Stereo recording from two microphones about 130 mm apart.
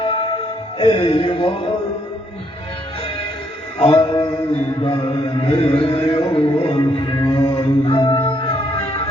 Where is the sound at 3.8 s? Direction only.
45° left (ahead or behind).